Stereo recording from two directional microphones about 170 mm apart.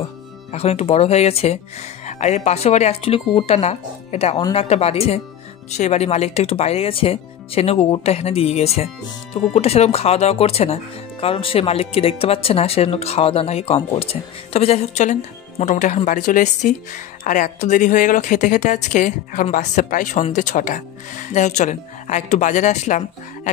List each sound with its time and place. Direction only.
0.5 s speech: 35° left (ahead or behind)